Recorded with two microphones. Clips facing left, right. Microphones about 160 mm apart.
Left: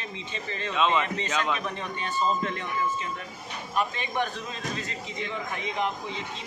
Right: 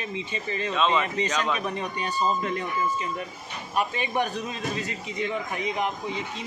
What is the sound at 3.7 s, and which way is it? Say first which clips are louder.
Speech: right 2 dB; 10° right (ahead or behind).